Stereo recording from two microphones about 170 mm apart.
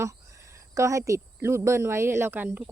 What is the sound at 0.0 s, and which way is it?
Speech, 15° right (ahead or behind).